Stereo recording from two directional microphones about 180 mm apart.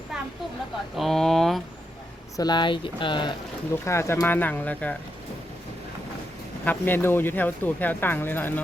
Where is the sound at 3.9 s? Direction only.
15° left (ahead or behind).